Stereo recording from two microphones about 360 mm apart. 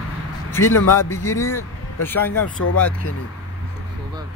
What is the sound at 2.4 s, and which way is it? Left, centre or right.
Speech, left.